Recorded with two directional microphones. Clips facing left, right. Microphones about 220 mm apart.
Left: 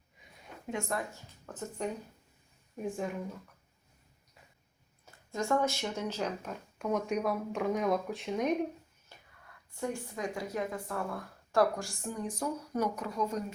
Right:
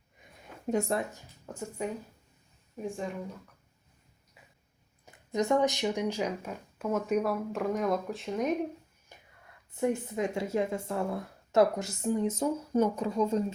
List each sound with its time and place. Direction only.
0.7 s speech: 30° right (ahead or behind)
1.1 s speech: 10° right (ahead or behind)
2.8 s speech: centre (ahead or behind)
5.0 s speech: 20° right (ahead or behind); by 8.5 s centre (ahead or behind)
9.1 s whispering: 15° right (ahead or behind)
9.7 s a woman's voice: 20° right (ahead or behind)